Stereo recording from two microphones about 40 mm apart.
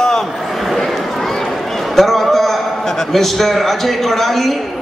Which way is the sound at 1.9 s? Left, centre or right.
Centre.